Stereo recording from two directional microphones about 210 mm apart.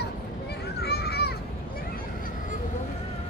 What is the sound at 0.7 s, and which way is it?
Children playing, 50° left (ahead or behind).